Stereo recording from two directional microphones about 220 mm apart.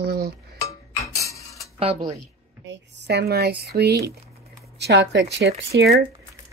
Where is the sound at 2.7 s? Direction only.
50° right (ahead or behind).